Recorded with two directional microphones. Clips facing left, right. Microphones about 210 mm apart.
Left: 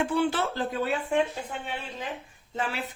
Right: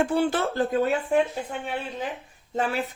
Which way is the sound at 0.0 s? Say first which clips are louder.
Right 3 dB; 45° right (ahead or behind).